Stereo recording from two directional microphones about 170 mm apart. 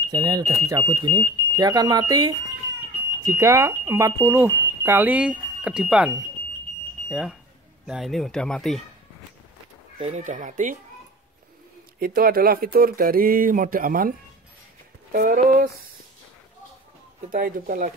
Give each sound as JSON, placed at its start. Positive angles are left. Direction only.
{"t": 0.1, "sound": "speech", "side_deg": -25}
{"t": 9.9, "sound": "speech", "side_deg": -40}
{"t": 12.0, "sound": "speech", "side_deg": -60}
{"t": 15.1, "sound": "speech", "side_deg": -55}
{"t": 17.3, "sound": "speech", "side_deg": -55}